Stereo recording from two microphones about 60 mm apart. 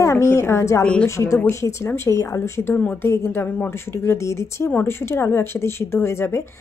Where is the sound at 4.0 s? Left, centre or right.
Left.